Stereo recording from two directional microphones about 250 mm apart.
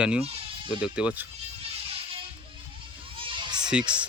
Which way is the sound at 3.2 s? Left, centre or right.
Right.